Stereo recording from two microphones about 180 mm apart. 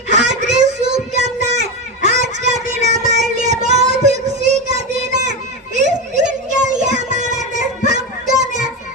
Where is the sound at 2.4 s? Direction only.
40° right (ahead or behind).